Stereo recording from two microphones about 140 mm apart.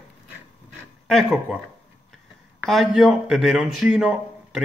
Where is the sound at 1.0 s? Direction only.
Centre (ahead or behind).